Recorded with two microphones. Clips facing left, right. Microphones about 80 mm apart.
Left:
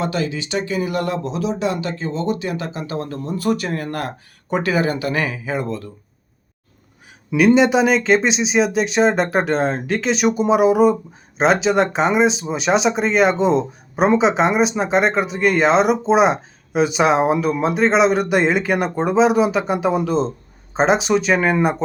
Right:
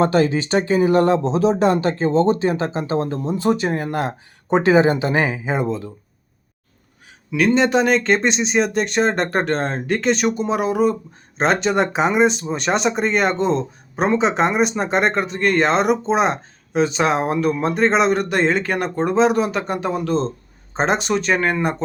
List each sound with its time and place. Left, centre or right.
0.0 s speech: right; by 5.9 s centre
7.3 s speech: centre